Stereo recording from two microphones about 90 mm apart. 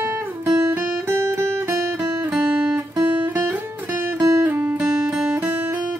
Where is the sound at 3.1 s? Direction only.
20° right (ahead or behind).